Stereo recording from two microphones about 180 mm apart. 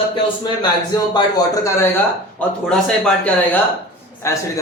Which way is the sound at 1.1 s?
20° left (ahead or behind).